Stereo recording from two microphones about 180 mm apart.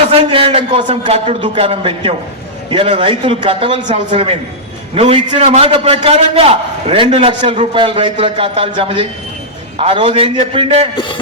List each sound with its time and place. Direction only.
0.1 s a man's voice: 30° right (ahead or behind)